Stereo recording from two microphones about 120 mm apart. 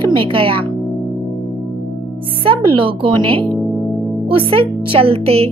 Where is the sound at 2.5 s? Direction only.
45° right (ahead or behind).